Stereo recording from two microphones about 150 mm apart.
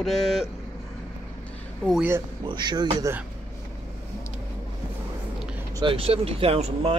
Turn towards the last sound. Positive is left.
turn(degrees=-40)  # may be behind; listen again after turning